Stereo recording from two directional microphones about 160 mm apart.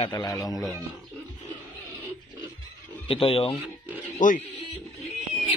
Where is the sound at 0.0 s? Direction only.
25° left (ahead or behind).